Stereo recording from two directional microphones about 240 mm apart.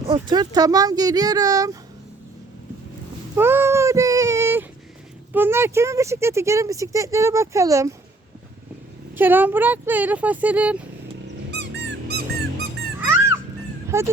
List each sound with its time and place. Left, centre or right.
0.0 s speech: right
3.3 s child singing: centre
5.3 s speech: centre
9.1 s speech: centre
11.5 s dog: right
13.9 s speech: centre